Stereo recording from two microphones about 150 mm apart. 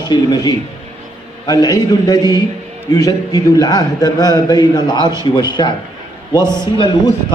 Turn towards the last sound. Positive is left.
turn(degrees=30)  # may be behind; listen again after turning